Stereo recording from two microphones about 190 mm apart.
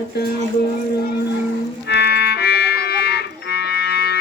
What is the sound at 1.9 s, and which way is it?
Music, 60° left (ahead or behind).